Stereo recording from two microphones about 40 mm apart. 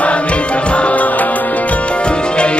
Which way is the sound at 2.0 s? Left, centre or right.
Left.